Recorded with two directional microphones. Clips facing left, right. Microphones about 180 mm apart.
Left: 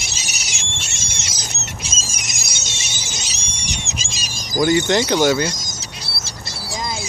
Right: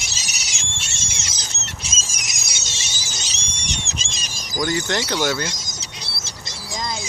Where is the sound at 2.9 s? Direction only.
20° left (ahead or behind).